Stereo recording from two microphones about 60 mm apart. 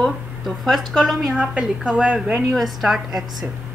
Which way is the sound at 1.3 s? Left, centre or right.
Centre.